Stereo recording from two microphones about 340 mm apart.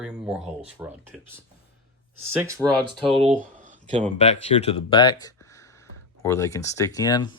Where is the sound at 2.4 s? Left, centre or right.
Centre.